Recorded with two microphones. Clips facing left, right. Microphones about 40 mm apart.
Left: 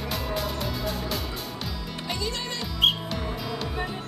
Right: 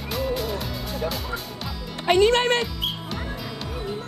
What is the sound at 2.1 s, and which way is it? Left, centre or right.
Speech, right.